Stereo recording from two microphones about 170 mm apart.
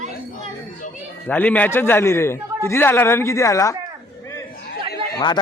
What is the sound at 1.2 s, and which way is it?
A man's voice, 10° left (ahead or behind).